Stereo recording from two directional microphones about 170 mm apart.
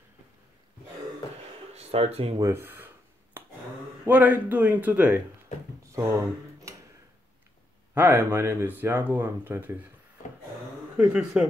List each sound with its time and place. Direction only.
1.7 s speech: 35° right (ahead or behind)
2.4 s speech: 15° right (ahead or behind)
3.4 s a sound: 10° right (ahead or behind)
4.0 s speech: 10° right (ahead or behind)
5.9 s a sound: 20° right (ahead or behind)
7.9 s speech: 10° right (ahead or behind)
11.0 s speech: 5° right (ahead or behind)